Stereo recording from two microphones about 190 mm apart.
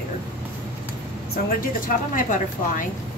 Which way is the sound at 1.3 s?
50° left (ahead or behind).